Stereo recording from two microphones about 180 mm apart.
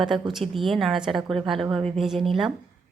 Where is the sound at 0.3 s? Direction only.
Centre (ahead or behind).